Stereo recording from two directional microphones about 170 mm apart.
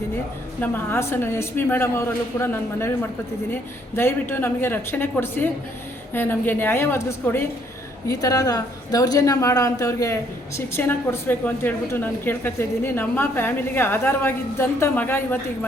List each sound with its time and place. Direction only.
0.6 s a woman's voice: 10° left (ahead or behind)